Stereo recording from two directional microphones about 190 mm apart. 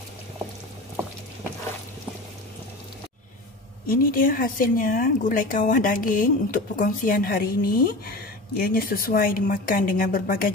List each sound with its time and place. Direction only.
3.8 s speech: 50° left (ahead or behind)